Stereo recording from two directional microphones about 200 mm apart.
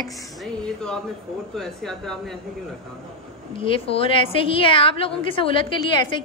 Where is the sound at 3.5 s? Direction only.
25° left (ahead or behind).